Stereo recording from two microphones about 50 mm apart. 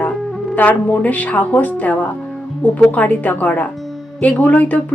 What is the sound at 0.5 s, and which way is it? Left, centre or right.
Speech, left.